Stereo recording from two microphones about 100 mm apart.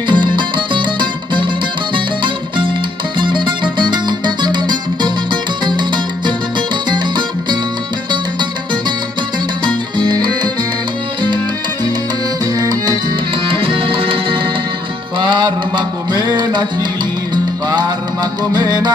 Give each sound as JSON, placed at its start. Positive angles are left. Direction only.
{"t": 0.1, "sound": "music", "side_deg": -50}
{"t": 9.9, "sound": "music", "side_deg": -45}
{"t": 12.5, "sound": "music", "side_deg": -40}
{"t": 13.5, "sound": "music", "side_deg": -65}
{"t": 15.1, "sound": "music", "side_deg": -50}
{"t": 17.6, "sound": "music", "side_deg": -40}